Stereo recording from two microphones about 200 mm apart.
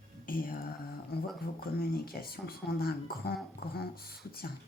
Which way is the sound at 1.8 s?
50° left (ahead or behind).